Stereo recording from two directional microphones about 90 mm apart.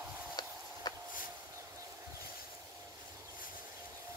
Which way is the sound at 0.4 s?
50° left (ahead or behind).